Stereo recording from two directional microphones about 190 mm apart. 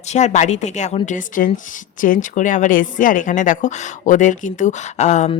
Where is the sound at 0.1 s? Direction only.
40° left (ahead or behind).